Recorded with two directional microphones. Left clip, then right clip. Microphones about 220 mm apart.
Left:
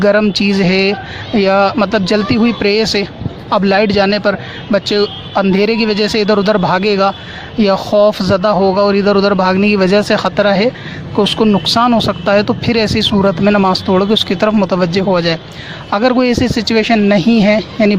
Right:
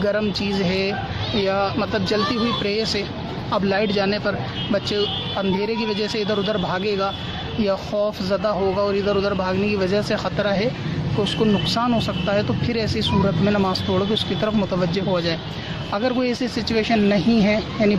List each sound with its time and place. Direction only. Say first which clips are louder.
0.0 s speech: left 11 dB; 40° left (ahead or behind)